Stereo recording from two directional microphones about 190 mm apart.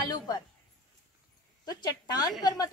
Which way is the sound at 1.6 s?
20° left (ahead or behind).